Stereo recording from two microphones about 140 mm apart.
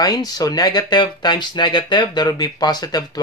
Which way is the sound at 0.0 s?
25° left (ahead or behind).